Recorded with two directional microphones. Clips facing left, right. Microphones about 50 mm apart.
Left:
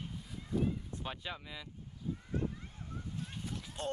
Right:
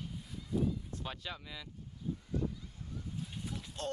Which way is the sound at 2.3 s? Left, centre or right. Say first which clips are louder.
Even; left.